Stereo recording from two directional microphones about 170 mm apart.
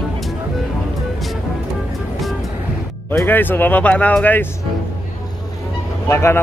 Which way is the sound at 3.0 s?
10° left (ahead or behind).